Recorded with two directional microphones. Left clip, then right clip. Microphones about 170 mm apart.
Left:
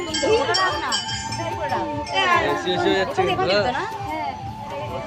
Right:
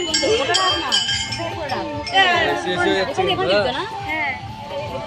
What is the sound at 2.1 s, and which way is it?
Music, 20° left (ahead or behind).